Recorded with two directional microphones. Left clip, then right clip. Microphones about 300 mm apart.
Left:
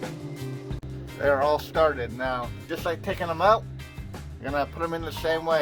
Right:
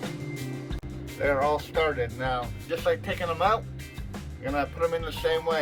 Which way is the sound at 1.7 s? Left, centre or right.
Left.